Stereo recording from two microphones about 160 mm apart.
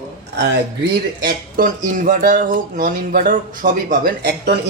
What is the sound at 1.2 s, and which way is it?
Speech, 60° right (ahead or behind).